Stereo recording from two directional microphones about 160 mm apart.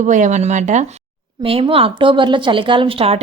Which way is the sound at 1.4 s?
35° right (ahead or behind).